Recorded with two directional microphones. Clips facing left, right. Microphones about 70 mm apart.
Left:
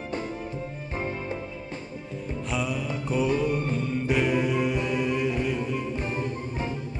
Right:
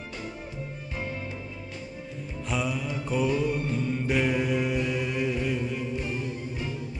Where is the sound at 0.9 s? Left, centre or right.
Left.